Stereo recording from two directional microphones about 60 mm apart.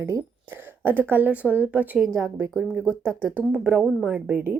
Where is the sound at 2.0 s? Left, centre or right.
Right.